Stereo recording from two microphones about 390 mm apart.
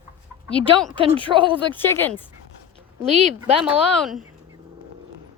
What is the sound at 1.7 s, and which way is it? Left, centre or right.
Speech, centre.